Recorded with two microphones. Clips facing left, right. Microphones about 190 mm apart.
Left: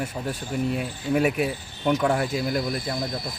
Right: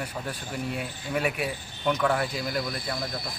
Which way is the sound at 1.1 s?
45° left (ahead or behind).